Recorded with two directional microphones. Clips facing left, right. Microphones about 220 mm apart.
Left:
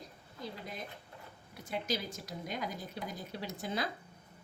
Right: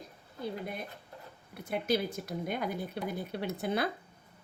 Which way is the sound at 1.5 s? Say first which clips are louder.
Right 6 dB; 60° right (ahead or behind).